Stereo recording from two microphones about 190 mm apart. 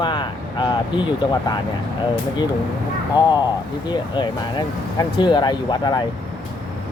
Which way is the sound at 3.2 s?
20° left (ahead or behind).